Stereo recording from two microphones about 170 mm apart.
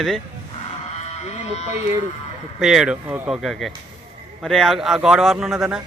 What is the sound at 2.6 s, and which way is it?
A man's voice, 5° right (ahead or behind).